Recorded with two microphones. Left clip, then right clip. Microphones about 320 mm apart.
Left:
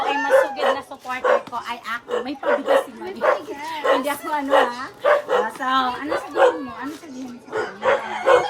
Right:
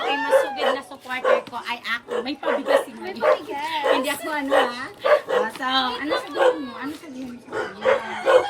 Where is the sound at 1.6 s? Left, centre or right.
Centre.